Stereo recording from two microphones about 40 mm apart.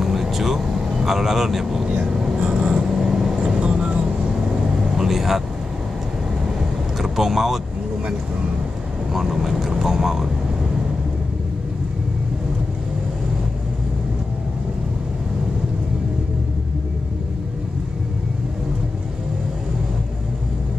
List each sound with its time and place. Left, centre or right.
0.0 s vehicle: centre
2.4 s vehicle: right
3.0 s vehicle: centre
4.9 s vehicle: centre
7.0 s speech: centre
9.1 s speech: centre